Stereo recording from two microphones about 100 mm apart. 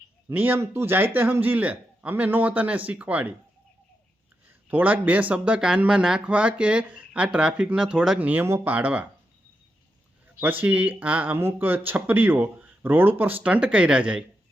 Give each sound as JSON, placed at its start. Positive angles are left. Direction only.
{"t": 0.3, "sound": "speech", "side_deg": -20}
{"t": 4.4, "sound": "speech", "side_deg": -15}
{"t": 10.6, "sound": "speech", "side_deg": -15}